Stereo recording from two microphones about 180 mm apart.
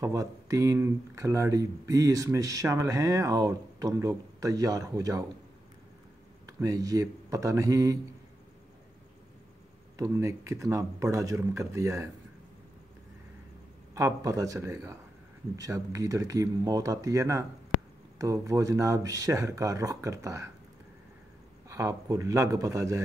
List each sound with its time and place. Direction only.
0.0 s speech: 15° right (ahead or behind)
6.6 s speech: 20° right (ahead or behind)
9.9 s speech: 15° right (ahead or behind)
13.9 s speech: 15° right (ahead or behind)
21.6 s speech: 15° right (ahead or behind)